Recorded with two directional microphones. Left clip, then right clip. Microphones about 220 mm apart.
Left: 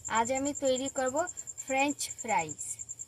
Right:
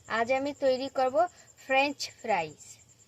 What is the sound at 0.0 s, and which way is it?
A woman's voice, 30° right (ahead or behind).